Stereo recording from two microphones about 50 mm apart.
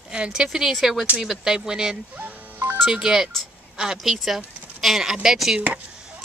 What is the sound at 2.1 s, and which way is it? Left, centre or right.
Music, right.